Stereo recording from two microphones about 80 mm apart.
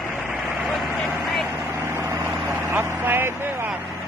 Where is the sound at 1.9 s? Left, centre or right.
Right.